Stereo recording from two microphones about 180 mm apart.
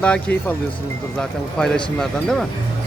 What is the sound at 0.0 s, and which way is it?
Speech, 5° left (ahead or behind).